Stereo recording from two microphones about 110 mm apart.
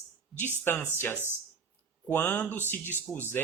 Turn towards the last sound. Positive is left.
turn(degrees=20)  # may be behind; listen again after turning